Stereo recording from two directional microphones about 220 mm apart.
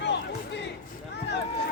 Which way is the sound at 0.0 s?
50° left (ahead or behind).